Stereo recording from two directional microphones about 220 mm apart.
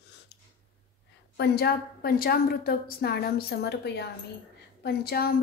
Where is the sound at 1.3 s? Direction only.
45° left (ahead or behind).